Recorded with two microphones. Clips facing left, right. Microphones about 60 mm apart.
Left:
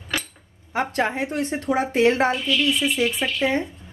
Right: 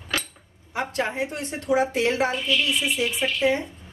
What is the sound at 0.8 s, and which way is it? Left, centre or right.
A woman's voice, left.